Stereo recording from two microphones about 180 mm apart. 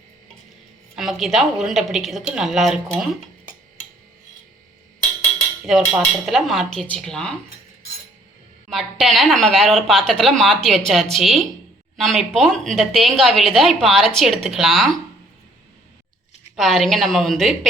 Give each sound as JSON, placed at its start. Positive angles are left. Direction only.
{"t": 0.9, "sound": "a woman's voice", "side_deg": 0}
{"t": 5.7, "sound": "a woman's voice", "side_deg": 0}
{"t": 8.7, "sound": "a woman's voice", "side_deg": 0}
{"t": 16.6, "sound": "a woman's voice", "side_deg": 0}